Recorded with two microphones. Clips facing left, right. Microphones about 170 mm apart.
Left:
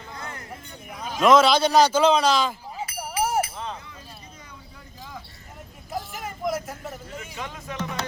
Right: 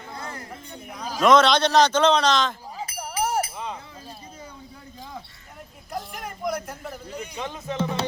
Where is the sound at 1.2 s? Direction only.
5° left (ahead or behind).